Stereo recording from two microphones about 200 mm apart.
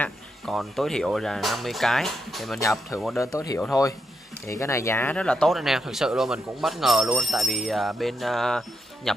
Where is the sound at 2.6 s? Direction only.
15° left (ahead or behind).